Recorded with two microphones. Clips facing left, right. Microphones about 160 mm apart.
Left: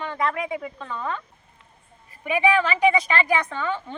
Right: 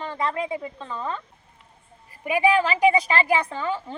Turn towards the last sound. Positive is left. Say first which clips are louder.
# even
turn(degrees=-35)  # may be behind; listen again after turning